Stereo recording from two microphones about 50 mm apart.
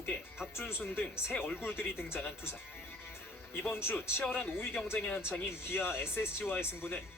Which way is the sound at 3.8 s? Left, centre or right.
Left.